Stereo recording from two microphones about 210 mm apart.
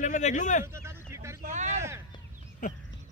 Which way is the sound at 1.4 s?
35° right (ahead or behind).